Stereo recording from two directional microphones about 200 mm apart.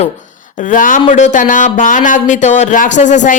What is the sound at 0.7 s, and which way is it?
Speech, 40° left (ahead or behind).